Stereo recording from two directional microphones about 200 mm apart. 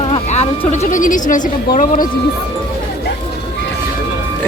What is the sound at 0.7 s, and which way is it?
Speech, 35° left (ahead or behind).